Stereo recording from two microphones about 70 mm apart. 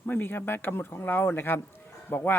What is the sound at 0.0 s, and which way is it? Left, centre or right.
Speech, left.